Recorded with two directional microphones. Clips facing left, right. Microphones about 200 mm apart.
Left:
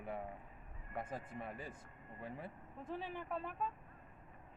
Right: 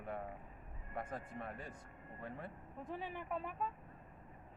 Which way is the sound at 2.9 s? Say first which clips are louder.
Even; 10° right (ahead or behind).